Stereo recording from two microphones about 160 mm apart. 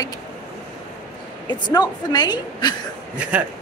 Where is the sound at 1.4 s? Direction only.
25° left (ahead or behind).